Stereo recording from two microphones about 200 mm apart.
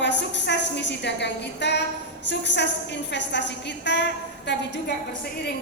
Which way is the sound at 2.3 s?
60° left (ahead or behind).